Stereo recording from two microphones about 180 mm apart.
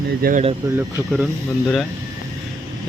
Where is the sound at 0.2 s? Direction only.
50° right (ahead or behind).